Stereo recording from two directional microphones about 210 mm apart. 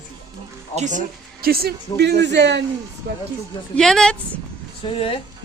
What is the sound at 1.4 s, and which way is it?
Speech, 45° right (ahead or behind).